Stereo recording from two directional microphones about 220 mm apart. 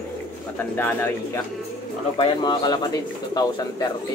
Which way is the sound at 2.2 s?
20° left (ahead or behind).